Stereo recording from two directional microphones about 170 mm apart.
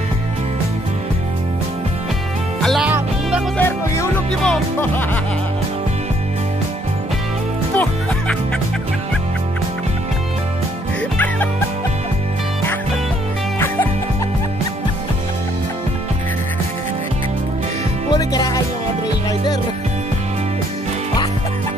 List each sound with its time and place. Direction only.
2.6 s music: 5° right (ahead or behind)
3.5 s music: 15° left (ahead or behind)
7.7 s music: 10° left (ahead or behind)
18.1 s music: 25° left (ahead or behind)